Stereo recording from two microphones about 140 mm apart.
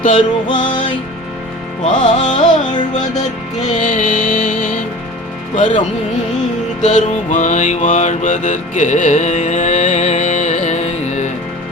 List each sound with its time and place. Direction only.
0.0 s music: 65° left (ahead or behind)
1.8 s music: 65° left (ahead or behind)
6.8 s mantra: 65° left (ahead or behind)